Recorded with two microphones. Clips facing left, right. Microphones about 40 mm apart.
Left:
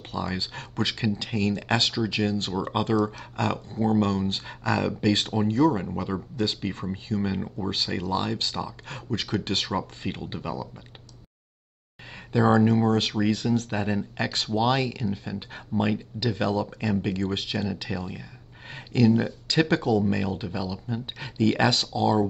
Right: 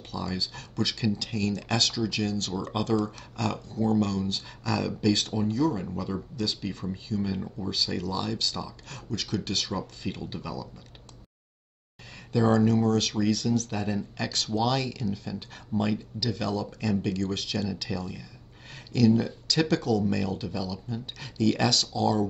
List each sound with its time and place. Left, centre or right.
0.1 s speech: left
12.3 s speech: left